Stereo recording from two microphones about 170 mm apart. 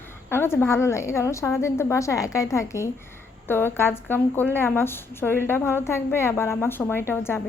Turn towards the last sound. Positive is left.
turn(degrees=15)  # may be behind; listen again after turning